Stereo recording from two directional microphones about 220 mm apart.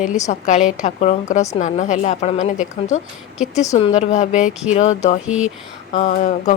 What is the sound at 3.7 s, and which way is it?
Speech, 25° left (ahead or behind).